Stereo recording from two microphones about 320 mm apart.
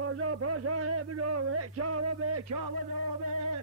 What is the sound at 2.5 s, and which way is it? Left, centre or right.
Music, right.